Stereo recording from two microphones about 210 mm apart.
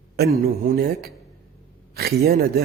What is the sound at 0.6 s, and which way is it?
Speech, 45° right (ahead or behind).